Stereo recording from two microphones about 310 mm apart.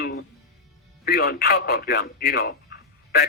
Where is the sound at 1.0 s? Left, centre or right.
Left.